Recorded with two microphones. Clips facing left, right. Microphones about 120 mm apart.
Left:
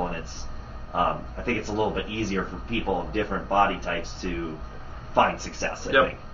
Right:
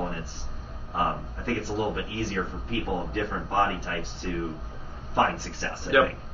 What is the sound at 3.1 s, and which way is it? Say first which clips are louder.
Speech: left 4 dB; 50° left (ahead or behind).